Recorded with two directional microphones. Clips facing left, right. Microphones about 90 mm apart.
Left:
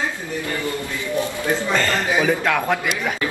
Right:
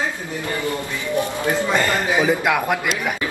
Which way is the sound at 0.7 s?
20° right (ahead or behind).